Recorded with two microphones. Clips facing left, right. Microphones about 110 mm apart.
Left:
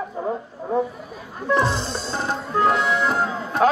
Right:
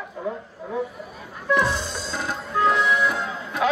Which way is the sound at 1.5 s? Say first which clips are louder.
Left 1 dB; 30° left (ahead or behind).